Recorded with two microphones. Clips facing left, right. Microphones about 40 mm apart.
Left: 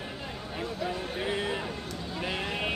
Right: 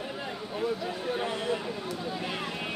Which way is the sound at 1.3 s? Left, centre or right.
Centre.